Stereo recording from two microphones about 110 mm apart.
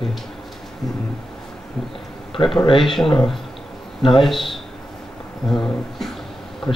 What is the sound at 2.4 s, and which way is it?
Speech, 35° left (ahead or behind).